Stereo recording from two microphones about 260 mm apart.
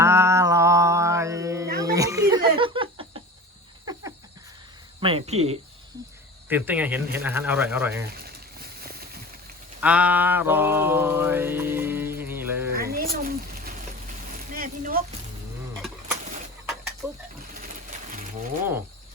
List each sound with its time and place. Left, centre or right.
0.0 s mantra: centre
1.8 s laughter: centre
4.9 s speech: right
6.5 s speech: centre
9.8 s mantra: centre
12.7 s a sound: right
17.0 s mechanisms: centre
17.6 s pigeon: right